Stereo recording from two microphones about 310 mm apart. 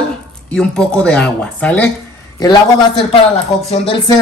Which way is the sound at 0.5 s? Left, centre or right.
Centre.